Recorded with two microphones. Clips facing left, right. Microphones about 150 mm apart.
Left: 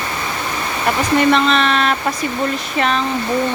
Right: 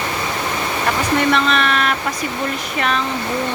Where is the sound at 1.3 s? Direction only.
25° left (ahead or behind).